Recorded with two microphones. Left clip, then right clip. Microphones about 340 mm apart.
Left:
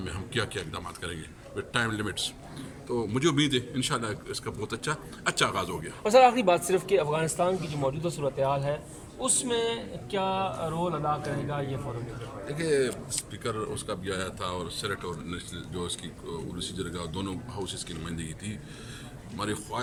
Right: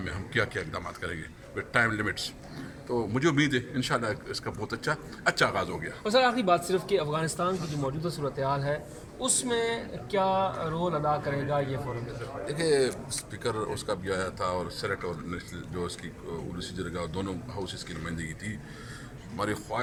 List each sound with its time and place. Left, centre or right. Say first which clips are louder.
0.0 s a man's voice: right 2 dB; centre
5.8 s speech: left 6 dB; left
7.3 s speech: left 2 dB; centre
12.5 s a man's voice: right 1 dB; centre